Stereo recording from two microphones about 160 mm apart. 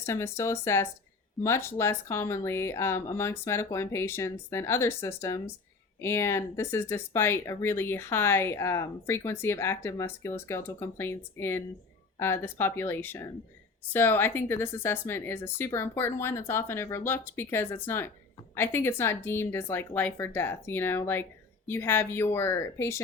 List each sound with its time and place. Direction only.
0.0 s speech: 15° left (ahead or behind)